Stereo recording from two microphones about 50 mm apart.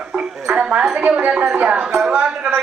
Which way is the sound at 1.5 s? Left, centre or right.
Right.